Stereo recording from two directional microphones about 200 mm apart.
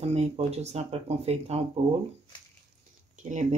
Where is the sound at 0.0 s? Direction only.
30° right (ahead or behind).